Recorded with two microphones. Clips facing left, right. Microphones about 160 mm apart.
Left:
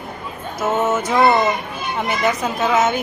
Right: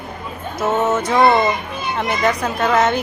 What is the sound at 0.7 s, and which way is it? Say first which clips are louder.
A woman's voice: right 1 dB; 5° left (ahead or behind).